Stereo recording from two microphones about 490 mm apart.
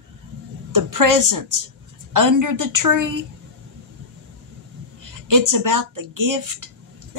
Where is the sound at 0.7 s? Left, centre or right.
Right.